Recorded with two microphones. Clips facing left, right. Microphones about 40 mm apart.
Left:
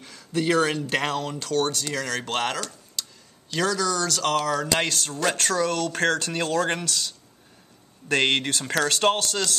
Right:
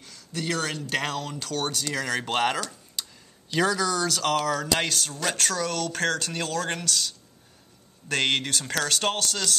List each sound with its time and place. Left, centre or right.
0.0 s speech: centre